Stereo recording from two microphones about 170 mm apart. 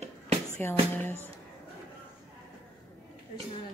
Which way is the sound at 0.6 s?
10° left (ahead or behind).